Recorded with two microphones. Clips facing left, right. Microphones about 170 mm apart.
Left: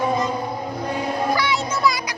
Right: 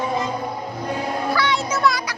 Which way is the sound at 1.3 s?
10° left (ahead or behind).